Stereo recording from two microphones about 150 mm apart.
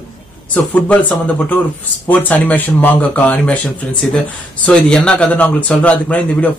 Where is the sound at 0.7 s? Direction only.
10° left (ahead or behind).